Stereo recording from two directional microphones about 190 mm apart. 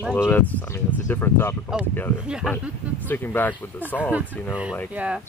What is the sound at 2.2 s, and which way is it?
Speech, 5° right (ahead or behind).